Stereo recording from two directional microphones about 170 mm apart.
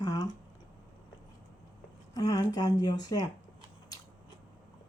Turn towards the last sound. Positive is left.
turn(degrees=20)  # may be behind; listen again after turning